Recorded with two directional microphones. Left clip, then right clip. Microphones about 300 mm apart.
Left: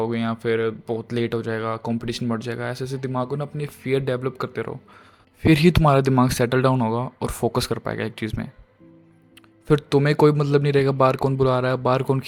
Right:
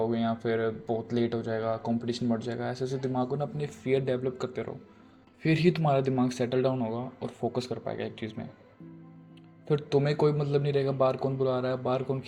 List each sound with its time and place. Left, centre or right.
0.0 s speech: left
9.6 s speech: left